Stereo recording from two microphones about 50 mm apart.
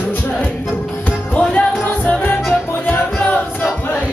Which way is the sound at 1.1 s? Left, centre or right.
Left.